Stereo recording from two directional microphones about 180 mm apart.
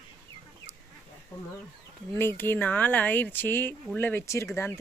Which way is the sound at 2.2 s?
10° left (ahead or behind).